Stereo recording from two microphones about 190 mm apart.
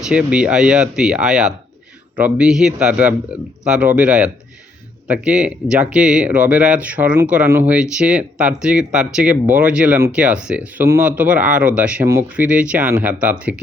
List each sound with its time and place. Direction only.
0.1 s speech: 5° right (ahead or behind)